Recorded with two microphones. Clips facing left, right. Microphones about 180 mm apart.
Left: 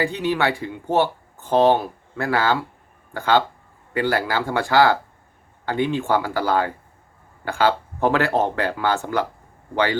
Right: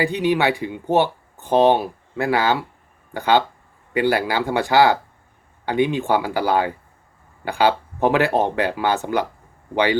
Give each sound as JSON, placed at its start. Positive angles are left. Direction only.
{"t": 0.0, "sound": "speech", "side_deg": -15}